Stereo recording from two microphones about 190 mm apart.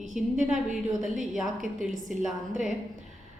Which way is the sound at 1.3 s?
Centre (ahead or behind).